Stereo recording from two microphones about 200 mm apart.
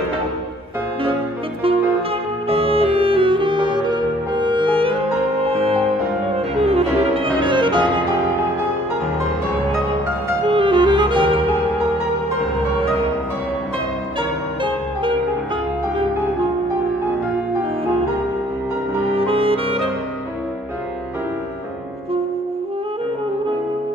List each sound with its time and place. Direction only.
2.5 s music: 30° right (ahead or behind)
10.4 s music: 25° right (ahead or behind)
19.0 s saxophone: 30° right (ahead or behind)